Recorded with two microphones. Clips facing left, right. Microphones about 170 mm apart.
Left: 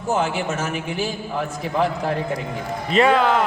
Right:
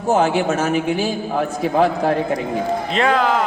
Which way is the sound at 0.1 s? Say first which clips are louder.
Right 6 dB; 50° right (ahead or behind).